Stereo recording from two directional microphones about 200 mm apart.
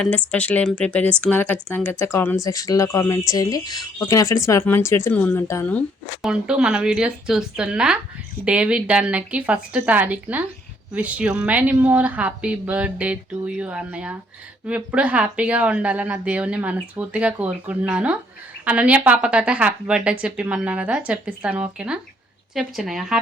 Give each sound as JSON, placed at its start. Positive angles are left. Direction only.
{"t": 0.0, "sound": "a woman's voice", "side_deg": 5}
{"t": 6.2, "sound": "a woman's voice", "side_deg": -5}